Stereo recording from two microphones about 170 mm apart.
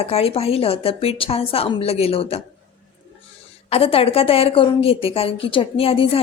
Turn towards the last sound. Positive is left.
turn(degrees=35)  # may be behind; listen again after turning